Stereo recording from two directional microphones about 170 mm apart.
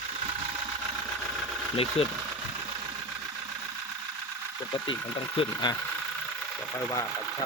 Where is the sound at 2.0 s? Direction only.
35° left (ahead or behind).